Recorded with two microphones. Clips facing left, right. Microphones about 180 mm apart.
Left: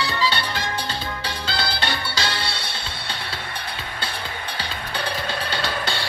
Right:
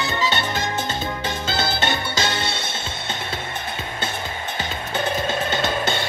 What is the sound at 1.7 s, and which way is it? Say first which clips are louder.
Music: right 3 dB; 20° right (ahead or behind).